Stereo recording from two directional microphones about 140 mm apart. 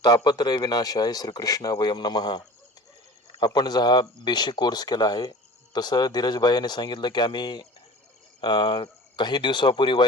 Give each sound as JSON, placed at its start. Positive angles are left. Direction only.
{"t": 0.0, "sound": "speech", "side_deg": 30}